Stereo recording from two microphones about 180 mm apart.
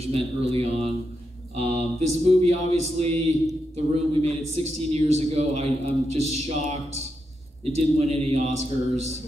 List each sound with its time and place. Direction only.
0.0 s a man's voice: 35° right (ahead or behind)